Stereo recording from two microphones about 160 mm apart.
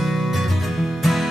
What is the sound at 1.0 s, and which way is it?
Music, centre (ahead or behind).